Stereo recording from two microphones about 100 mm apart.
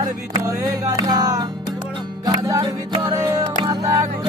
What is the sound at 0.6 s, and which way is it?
Music, 40° right (ahead or behind).